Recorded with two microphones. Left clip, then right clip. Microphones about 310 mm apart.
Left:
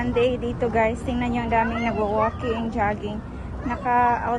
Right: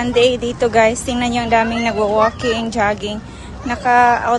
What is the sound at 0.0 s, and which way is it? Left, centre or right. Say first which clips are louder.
A woman's voice: right 8 dB; centre.